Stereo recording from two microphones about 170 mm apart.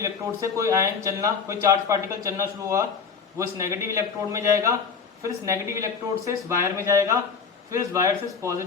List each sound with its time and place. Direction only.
0.0 s speech: 20° right (ahead or behind)